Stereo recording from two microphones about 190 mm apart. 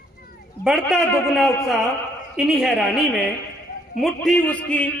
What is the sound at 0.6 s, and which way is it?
A woman's voice, centre (ahead or behind).